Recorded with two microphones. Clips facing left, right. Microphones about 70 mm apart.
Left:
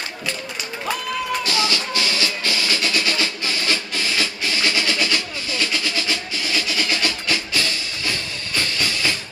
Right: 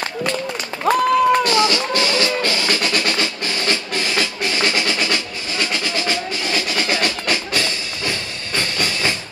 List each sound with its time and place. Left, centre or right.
0.8 s music: right
4.6 s music: right
7.1 s music: right